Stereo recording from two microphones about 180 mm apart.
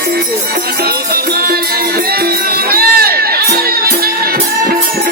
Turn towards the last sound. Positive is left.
turn(degrees=-55)  # may be behind; listen again after turning